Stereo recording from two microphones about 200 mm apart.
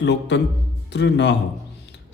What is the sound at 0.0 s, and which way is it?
A man's voice, 60° left (ahead or behind).